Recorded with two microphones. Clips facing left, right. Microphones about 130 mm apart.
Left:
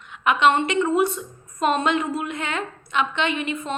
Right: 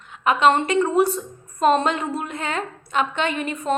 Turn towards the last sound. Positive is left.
turn(degrees=-40)  # may be behind; listen again after turning